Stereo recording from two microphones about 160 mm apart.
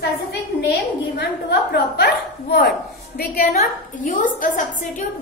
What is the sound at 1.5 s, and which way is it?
Hiccup, 85° left.